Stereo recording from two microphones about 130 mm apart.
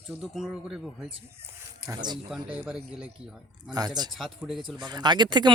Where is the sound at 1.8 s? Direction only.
35° right (ahead or behind).